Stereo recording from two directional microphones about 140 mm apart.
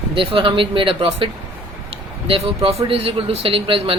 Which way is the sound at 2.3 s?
45° right (ahead or behind).